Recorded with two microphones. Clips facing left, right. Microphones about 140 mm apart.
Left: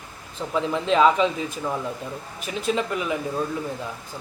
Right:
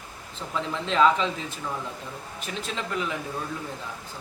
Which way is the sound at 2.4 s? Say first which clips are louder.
Left 9 dB; 10° left (ahead or behind).